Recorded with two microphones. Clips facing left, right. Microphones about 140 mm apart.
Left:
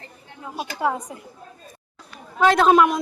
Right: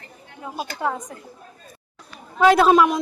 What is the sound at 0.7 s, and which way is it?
Speech, 10° left (ahead or behind).